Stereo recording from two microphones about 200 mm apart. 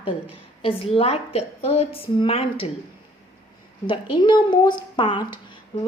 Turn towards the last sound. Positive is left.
turn(degrees=25)  # may be behind; listen again after turning